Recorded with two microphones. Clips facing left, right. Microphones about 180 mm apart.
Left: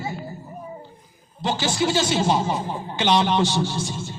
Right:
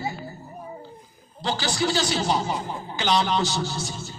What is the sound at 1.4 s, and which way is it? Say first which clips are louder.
A man's voice: left 3 dB; 25° left (ahead or behind).